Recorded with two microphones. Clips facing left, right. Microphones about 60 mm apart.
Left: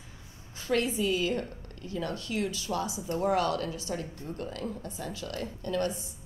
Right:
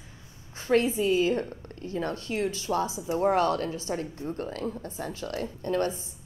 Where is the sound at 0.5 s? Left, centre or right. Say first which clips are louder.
Right 5 dB; right.